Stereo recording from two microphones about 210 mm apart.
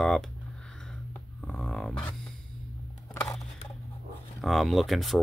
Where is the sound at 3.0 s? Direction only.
15° left (ahead or behind).